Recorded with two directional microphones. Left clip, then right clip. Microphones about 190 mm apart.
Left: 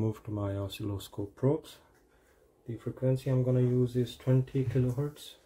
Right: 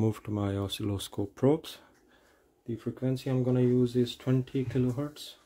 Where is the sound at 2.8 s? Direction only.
60° right (ahead or behind).